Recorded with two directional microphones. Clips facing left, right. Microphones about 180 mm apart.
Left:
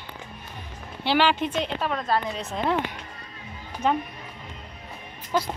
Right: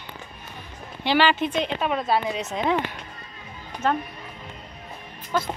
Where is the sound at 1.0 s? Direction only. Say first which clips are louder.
Right 1 dB; 10° right (ahead or behind).